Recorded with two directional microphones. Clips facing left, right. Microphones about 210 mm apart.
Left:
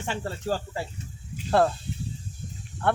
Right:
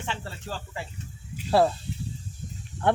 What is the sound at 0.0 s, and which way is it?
Speech, 45° left (ahead or behind).